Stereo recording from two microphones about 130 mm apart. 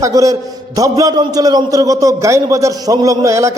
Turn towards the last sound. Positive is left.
turn(degrees=-25)  # may be behind; listen again after turning